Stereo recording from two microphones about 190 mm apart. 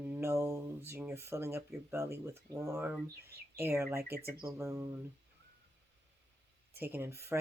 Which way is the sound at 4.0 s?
55° right (ahead or behind).